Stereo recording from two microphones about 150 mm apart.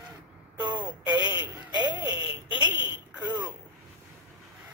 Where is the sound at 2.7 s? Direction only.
30° left (ahead or behind).